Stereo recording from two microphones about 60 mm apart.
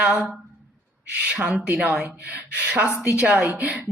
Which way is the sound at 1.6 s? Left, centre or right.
Centre.